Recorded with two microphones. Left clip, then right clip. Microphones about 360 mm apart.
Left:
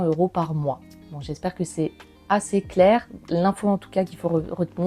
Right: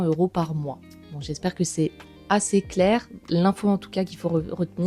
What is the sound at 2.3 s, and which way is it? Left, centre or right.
Speech, left.